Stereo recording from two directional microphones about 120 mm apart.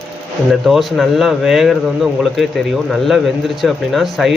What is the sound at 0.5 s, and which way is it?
A man's voice, centre (ahead or behind).